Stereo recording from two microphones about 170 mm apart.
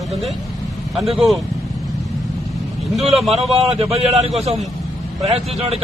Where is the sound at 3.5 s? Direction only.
35° right (ahead or behind).